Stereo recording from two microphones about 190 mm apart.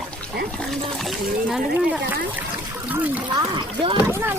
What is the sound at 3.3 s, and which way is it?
Speech, 20° right (ahead or behind).